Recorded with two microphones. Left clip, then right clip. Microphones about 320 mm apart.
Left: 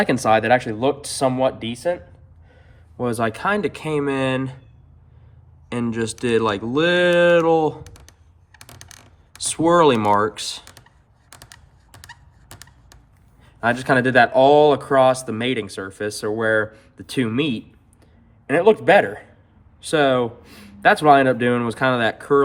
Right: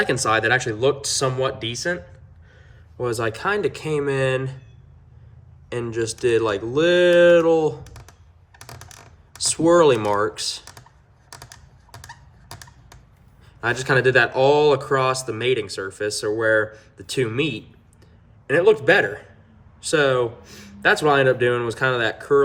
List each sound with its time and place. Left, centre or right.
0.0 s speech: centre
3.0 s speech: centre
5.6 s speech: left
9.4 s speech: left
13.4 s speech: left